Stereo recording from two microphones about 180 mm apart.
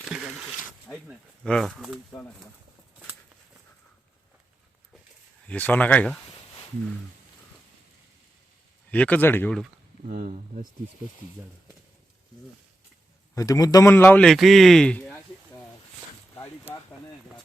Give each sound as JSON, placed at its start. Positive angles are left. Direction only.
{"t": 0.1, "sound": "a sound", "side_deg": -5}
{"t": 1.5, "sound": "speech", "side_deg": 0}
{"t": 2.1, "sound": "speech", "side_deg": 10}
{"t": 5.5, "sound": "speech", "side_deg": 10}
{"t": 8.9, "sound": "speech", "side_deg": 10}
{"t": 10.1, "sound": "speech", "side_deg": -45}
{"t": 13.3, "sound": "a man's voice", "side_deg": 20}